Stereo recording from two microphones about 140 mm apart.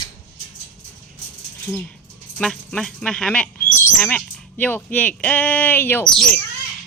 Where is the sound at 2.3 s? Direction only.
5° left (ahead or behind).